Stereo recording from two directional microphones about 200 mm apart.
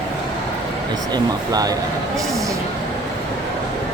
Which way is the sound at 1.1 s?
20° right (ahead or behind).